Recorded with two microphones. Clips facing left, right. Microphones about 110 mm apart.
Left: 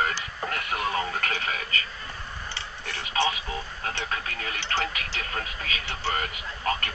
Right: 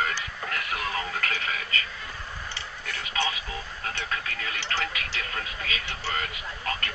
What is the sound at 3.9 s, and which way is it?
Speech, 30° left (ahead or behind).